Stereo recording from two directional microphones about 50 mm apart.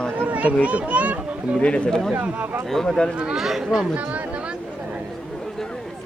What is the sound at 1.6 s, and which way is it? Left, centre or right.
Speech, left.